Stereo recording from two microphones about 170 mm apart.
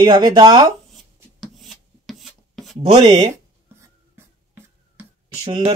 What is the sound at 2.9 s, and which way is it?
Speech, 25° right (ahead or behind).